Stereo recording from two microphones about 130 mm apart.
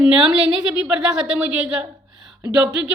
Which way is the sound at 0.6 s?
5° right (ahead or behind).